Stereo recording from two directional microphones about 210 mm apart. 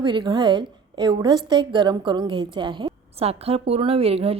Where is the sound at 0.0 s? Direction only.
20° right (ahead or behind).